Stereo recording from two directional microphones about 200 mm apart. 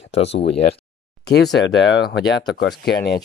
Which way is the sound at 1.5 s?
60° left (ahead or behind).